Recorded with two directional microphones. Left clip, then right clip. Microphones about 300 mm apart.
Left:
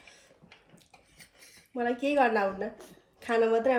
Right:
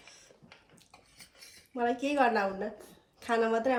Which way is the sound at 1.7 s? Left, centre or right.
Centre.